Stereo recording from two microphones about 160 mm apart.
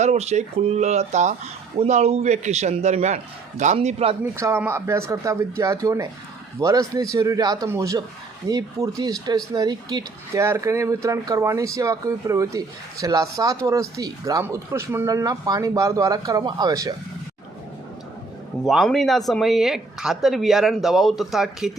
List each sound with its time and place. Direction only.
0.0 s a man's voice: 45° right (ahead or behind)
4.2 s speech: 15° right (ahead or behind)
18.6 s speech: centre (ahead or behind)